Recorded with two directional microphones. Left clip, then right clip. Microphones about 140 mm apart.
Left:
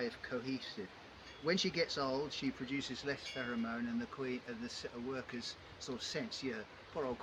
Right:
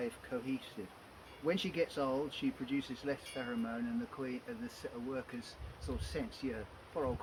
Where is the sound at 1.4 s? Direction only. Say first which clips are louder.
Even; 35° left (ahead or behind).